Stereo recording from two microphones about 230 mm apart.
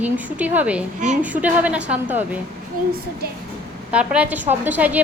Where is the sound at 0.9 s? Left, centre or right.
Right.